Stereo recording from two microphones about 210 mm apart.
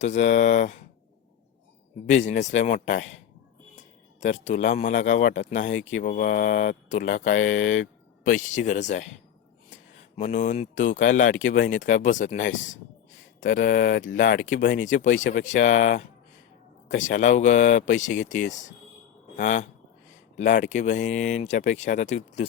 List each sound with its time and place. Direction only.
0.0 s speech: 35° left (ahead or behind)
2.0 s speech: 35° left (ahead or behind)
4.2 s speech: 35° left (ahead or behind)
10.2 s speech: 35° left (ahead or behind)
12.5 s speech: 65° left (ahead or behind)
13.4 s speech: 40° left (ahead or behind)